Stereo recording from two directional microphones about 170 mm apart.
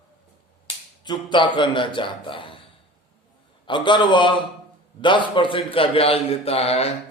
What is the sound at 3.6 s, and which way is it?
A man's voice, 30° left (ahead or behind).